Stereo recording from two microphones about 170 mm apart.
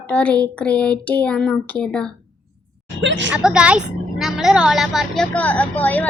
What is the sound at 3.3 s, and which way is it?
A woman's voice, 5° right (ahead or behind).